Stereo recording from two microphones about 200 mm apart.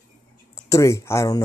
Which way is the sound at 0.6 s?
15° left (ahead or behind).